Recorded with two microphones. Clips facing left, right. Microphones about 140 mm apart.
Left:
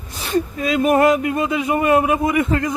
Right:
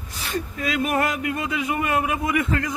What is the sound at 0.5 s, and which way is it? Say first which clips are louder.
Speech: left 7 dB; 25° left (ahead or behind).